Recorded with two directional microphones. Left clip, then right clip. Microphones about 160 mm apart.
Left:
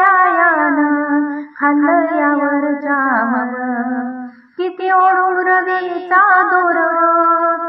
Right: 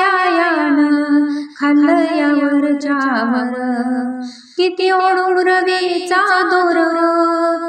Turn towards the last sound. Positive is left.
turn(degrees=-45)  # may be behind; listen again after turning